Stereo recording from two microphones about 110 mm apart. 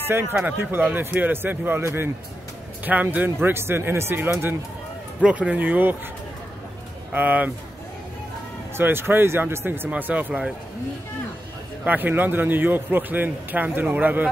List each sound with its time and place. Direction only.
0.1 s a man's voice: 20° right (ahead or behind)
7.1 s a man's voice: 15° right (ahead or behind)
8.7 s a man's voice: 20° right (ahead or behind)
11.8 s a man's voice: 15° right (ahead or behind)